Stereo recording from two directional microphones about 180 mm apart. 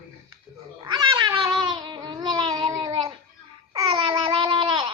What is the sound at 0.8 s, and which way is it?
Cat, 25° right (ahead or behind).